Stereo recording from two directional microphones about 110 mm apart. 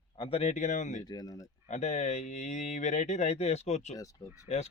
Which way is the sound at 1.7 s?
90° left.